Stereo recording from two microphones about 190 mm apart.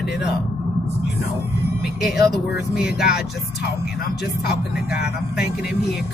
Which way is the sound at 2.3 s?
60° left (ahead or behind).